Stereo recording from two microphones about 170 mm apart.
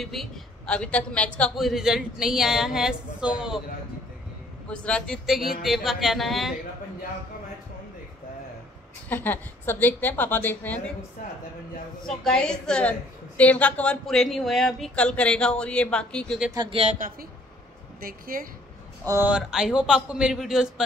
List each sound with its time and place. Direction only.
0.0 s a woman's voice: centre (ahead or behind)
4.6 s a woman's voice: 5° left (ahead or behind)
9.1 s a woman's voice: 10° left (ahead or behind)
12.2 s a woman's voice: 5° left (ahead or behind)
16.5 s speech: 35° right (ahead or behind)
18.0 s speech: 55° right (ahead or behind)
19.0 s a woman's voice: 10° right (ahead or behind)